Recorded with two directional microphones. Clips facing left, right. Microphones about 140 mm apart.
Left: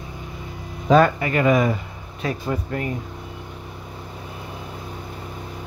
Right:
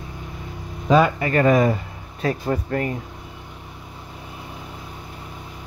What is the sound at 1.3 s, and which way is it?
Speech, 40° right (ahead or behind).